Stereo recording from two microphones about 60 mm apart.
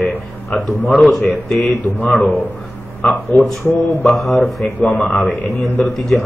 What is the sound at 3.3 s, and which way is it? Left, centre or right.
Speech, left.